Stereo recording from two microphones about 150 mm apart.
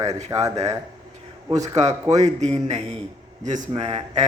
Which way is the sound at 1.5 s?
50° right (ahead or behind).